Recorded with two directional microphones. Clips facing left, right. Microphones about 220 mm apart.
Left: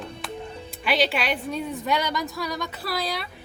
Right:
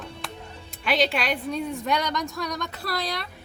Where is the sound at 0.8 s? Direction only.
Centre (ahead or behind).